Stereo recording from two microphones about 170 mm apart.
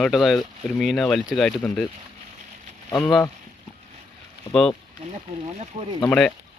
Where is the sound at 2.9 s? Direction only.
20° left (ahead or behind).